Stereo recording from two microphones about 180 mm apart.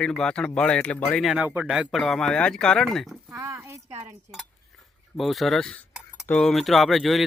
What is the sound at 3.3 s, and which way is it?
Speech, 15° right (ahead or behind).